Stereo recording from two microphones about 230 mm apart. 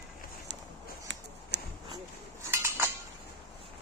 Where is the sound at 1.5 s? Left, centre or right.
Right.